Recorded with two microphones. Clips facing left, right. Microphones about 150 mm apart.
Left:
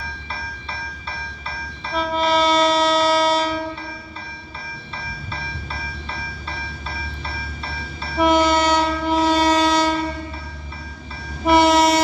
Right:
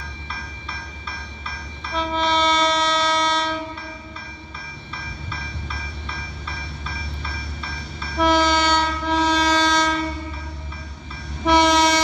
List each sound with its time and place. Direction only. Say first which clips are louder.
2.0 s train: left 2 dB; 5° left (ahead or behind)
4.9 s train: left 2 dB; 35° left (ahead or behind)
6.9 s a sound: left 2 dB; 35° left (ahead or behind)
8.2 s train: left 2 dB; 5° left (ahead or behind)
11.4 s train: left 2 dB; 5° left (ahead or behind)